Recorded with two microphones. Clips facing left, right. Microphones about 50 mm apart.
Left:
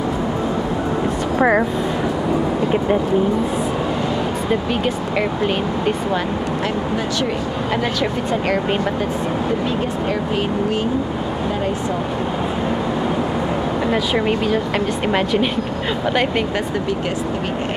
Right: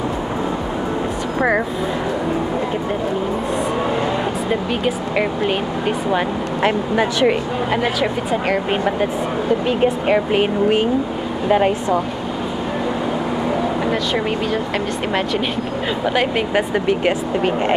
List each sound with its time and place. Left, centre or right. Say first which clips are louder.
1.4 s speech: left 2 dB; centre
4.8 s speech: right 1 dB; centre
7.7 s speech: right 1 dB; centre
9.7 s speech: right 4 dB; right
13.9 s speech: left 2 dB; centre
16.1 s speech: even; centre